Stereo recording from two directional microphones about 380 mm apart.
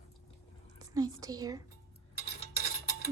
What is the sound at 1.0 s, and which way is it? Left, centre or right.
Speech, centre.